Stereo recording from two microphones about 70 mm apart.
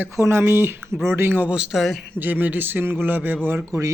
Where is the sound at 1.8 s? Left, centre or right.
Centre.